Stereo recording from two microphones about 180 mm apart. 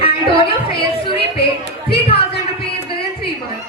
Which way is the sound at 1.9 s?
30° left (ahead or behind).